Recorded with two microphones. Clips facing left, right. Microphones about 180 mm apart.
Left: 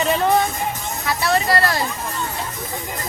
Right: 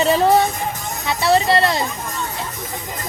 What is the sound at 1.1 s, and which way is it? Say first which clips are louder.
Speech: right 3 dB; 25° right (ahead or behind).